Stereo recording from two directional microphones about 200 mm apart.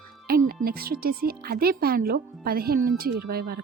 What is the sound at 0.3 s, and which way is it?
Speech, 50° right (ahead or behind).